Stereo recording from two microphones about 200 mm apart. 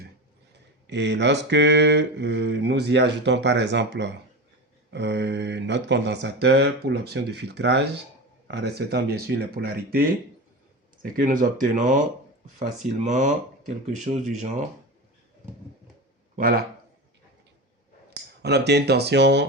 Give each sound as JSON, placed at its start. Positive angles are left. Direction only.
{"t": 0.9, "sound": "mantra", "side_deg": -60}
{"t": 8.4, "sound": "speech", "side_deg": -55}
{"t": 13.1, "sound": "speech", "side_deg": -40}
{"t": 16.3, "sound": "a man's voice", "side_deg": -50}
{"t": 18.1, "sound": "speech", "side_deg": -55}